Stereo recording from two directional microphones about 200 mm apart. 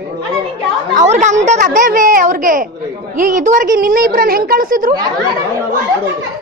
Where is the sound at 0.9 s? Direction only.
35° right (ahead or behind).